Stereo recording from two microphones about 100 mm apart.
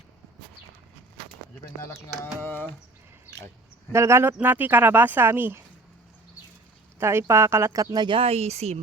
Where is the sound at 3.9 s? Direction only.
25° right (ahead or behind).